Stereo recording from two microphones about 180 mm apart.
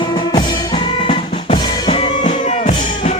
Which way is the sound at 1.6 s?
25° left (ahead or behind).